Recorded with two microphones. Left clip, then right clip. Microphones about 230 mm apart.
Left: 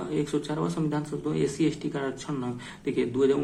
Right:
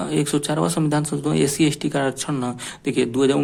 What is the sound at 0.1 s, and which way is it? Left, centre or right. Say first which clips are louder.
Speech: right 6 dB; right.